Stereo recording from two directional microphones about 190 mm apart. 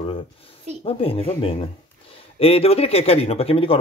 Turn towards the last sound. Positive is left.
turn(degrees=30)  # may be behind; listen again after turning